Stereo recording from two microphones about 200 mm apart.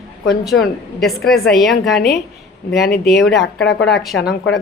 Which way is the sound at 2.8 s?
55° left (ahead or behind).